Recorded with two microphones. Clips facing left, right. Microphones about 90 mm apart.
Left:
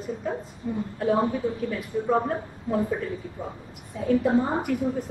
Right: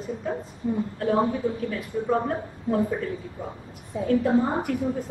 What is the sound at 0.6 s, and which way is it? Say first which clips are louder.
Speech: right 4 dB; 15° right (ahead or behind).